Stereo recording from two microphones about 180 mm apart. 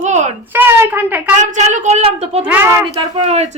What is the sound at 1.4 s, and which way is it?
A woman's voice, 40° right (ahead or behind).